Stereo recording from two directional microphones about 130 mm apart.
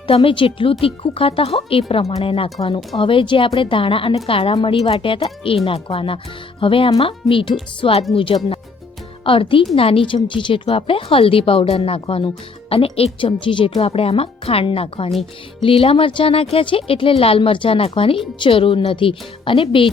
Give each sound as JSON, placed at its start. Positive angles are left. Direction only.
{"t": 0.1, "sound": "a woman's voice", "side_deg": 45}